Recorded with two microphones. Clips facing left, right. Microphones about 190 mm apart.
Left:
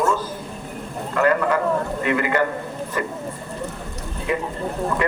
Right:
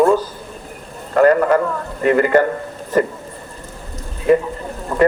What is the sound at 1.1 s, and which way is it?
A man's voice, 45° right (ahead or behind).